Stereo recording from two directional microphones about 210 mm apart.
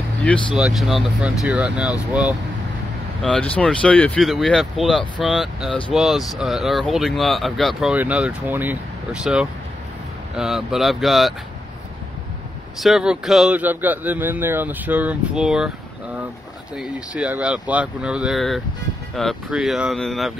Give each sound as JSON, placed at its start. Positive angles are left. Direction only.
{"t": 0.6, "sound": "speech", "side_deg": 0}
{"t": 12.8, "sound": "speech", "side_deg": -5}
{"t": 16.7, "sound": "speech", "side_deg": -5}